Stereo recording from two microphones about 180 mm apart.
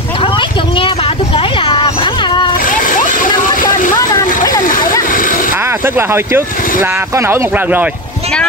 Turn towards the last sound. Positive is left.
turn(degrees=-10)  # may be behind; listen again after turning